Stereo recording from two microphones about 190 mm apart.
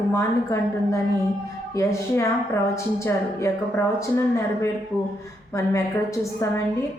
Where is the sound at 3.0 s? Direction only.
15° left (ahead or behind).